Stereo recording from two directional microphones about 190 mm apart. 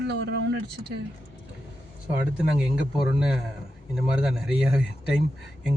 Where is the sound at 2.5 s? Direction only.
5° right (ahead or behind).